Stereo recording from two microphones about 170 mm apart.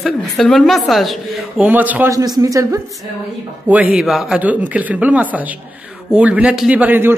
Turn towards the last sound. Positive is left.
turn(degrees=-10)  # may be behind; listen again after turning